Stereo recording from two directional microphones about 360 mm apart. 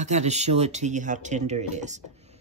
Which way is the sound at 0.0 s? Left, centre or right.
Centre.